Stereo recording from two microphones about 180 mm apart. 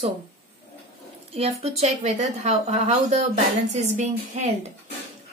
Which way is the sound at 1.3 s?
35° right (ahead or behind).